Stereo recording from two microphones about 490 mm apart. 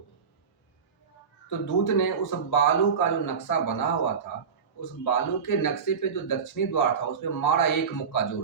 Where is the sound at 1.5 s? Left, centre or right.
Left.